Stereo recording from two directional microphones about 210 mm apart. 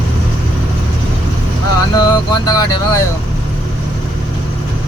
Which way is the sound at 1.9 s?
20° left (ahead or behind).